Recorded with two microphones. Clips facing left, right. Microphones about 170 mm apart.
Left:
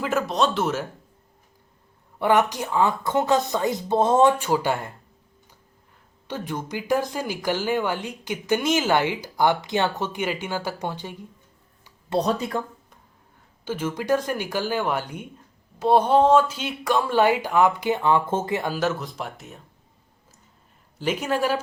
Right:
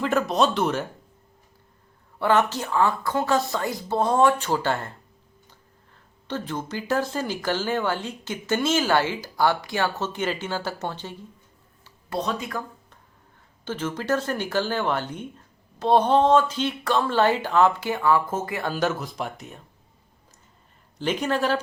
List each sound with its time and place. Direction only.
0.0 s speech: 5° left (ahead or behind)
2.1 s speech: 15° left (ahead or behind)
6.2 s speech: 10° left (ahead or behind)
12.2 s speech: 35° left (ahead or behind)
13.7 s speech: 10° left (ahead or behind); by 18.6 s 25° left (ahead or behind)
18.7 s speech: centre (ahead or behind)
21.0 s speech: 10° left (ahead or behind)